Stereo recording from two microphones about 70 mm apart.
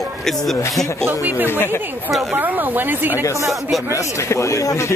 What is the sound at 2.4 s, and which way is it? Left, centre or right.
Speech, right.